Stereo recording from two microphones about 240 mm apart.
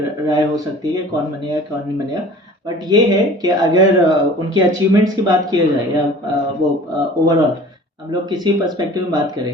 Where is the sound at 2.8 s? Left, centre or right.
Centre.